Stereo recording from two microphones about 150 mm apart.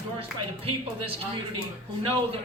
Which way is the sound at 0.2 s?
40° right (ahead or behind).